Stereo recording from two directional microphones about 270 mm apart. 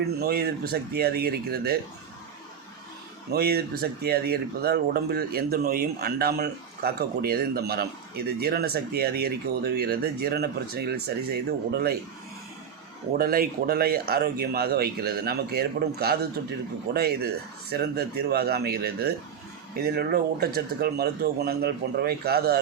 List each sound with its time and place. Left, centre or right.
0.2 s speech: right
3.3 s speech: right
13.1 s speech: right